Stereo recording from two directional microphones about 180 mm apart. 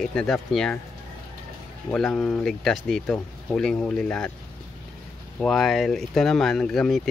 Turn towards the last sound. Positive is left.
turn(degrees=0)  # may be behind; listen again after turning